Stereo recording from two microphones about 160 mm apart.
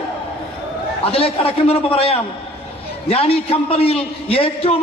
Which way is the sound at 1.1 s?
35° left (ahead or behind).